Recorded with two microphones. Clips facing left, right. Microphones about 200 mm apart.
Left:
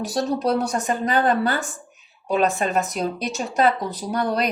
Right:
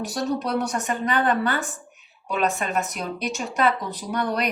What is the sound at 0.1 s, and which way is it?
Speech, 30° left (ahead or behind).